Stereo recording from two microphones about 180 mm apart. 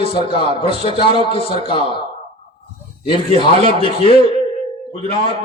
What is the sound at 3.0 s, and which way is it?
A man's voice, 30° left (ahead or behind).